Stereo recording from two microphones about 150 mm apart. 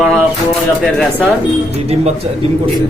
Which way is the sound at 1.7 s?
45° right (ahead or behind).